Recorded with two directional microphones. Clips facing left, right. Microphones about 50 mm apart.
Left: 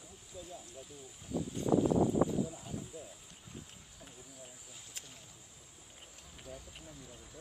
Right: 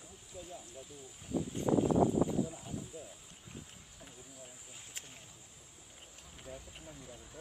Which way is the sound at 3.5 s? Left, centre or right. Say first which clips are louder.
Even; left.